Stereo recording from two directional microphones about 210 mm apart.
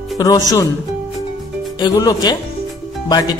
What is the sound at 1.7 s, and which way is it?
A woman's voice, 20° left (ahead or behind).